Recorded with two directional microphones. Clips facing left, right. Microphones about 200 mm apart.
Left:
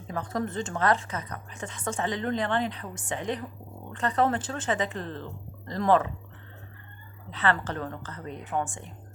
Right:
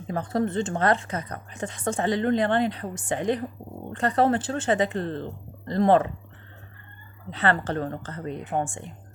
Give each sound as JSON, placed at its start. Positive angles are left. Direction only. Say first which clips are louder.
{"t": 0.1, "sound": "a woman's voice", "louder": "right 5 dB", "side_deg": -30}
{"t": 7.3, "sound": "a woman's voice", "louder": "right 3 dB", "side_deg": -35}